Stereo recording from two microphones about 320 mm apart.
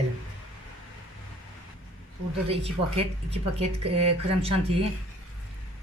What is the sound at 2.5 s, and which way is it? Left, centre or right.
Speech, centre.